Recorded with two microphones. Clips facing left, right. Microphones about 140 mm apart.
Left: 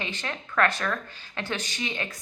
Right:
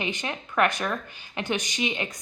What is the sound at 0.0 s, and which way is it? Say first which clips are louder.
Speech: right 3 dB; 15° right (ahead or behind).